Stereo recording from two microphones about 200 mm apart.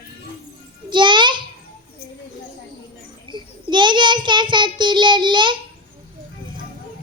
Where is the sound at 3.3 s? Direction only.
25° right (ahead or behind).